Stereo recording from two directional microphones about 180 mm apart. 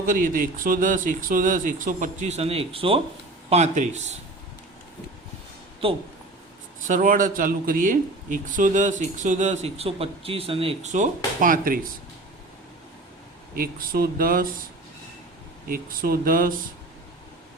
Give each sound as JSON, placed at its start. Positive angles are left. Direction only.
{"t": 0.0, "sound": "speech", "side_deg": -50}
{"t": 5.8, "sound": "speech", "side_deg": -30}
{"t": 6.8, "sound": "speech", "side_deg": -45}
{"t": 13.6, "sound": "speech", "side_deg": -55}
{"t": 15.7, "sound": "speech", "side_deg": -55}